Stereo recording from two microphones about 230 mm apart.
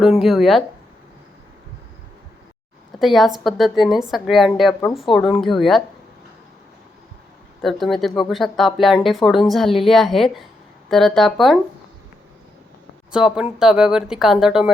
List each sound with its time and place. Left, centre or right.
0.0 s speech: centre
3.0 s speech: centre
7.6 s speech: centre
13.1 s speech: centre